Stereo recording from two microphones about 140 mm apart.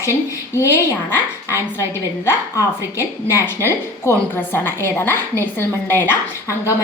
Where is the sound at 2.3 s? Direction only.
20° left (ahead or behind).